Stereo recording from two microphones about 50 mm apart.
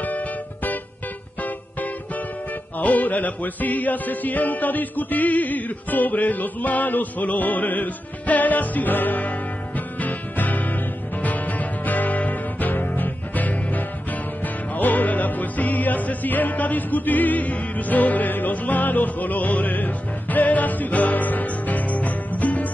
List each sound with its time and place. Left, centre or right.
2.8 s music: left